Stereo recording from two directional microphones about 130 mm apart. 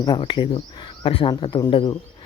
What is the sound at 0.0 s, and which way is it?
Speech, 35° left (ahead or behind).